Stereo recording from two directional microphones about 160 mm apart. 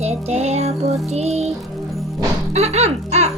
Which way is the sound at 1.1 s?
45° right (ahead or behind).